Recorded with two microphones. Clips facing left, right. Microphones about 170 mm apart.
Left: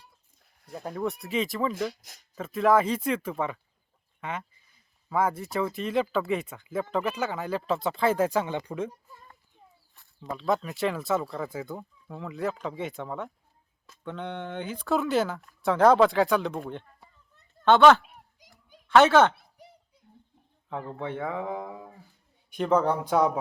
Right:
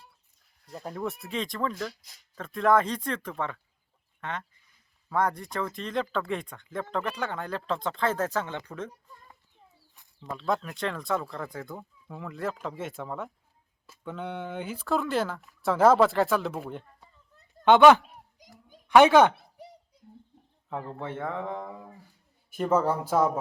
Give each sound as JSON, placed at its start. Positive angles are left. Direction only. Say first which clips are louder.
{"t": 0.7, "sound": "speech", "louder": "left 3 dB", "side_deg": 0}
{"t": 10.3, "sound": "speech", "louder": "left 2 dB", "side_deg": 0}
{"t": 18.1, "sound": "children playing", "louder": "right 3 dB", "side_deg": -45}
{"t": 18.9, "sound": "speech", "louder": "right 1 dB", "side_deg": -15}
{"t": 20.7, "sound": "speech", "louder": "left 1 dB", "side_deg": 0}